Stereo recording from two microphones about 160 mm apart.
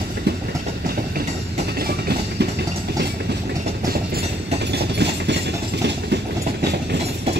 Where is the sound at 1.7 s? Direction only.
80° right.